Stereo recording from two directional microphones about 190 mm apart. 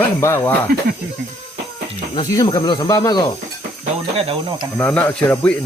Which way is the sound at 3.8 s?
30° right (ahead or behind).